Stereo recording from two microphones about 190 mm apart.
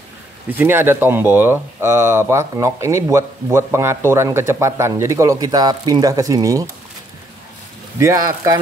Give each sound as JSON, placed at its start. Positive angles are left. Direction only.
{"t": 0.5, "sound": "speech", "side_deg": -10}
{"t": 8.0, "sound": "speech", "side_deg": -15}